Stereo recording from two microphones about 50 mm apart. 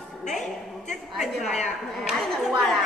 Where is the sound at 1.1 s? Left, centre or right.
Centre.